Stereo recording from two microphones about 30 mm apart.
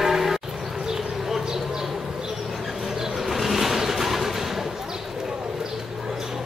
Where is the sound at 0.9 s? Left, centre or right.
Centre.